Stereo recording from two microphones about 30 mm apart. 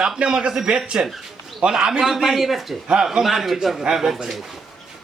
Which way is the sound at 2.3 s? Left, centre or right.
Centre.